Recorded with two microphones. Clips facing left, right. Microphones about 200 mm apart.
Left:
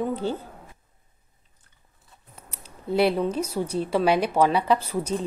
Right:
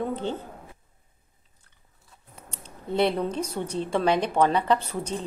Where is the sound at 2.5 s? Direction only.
5° left (ahead or behind).